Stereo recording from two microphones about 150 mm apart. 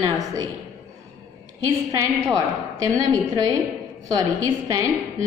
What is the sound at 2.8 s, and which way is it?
A woman's voice, 25° right (ahead or behind).